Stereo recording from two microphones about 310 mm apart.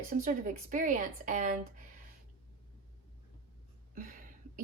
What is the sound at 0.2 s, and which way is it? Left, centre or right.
Speech, right.